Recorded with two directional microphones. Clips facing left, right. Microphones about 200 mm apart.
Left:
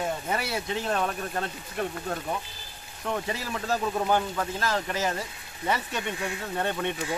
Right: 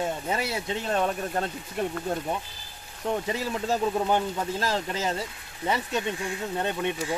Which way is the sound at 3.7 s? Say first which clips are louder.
Even; 20° right (ahead or behind).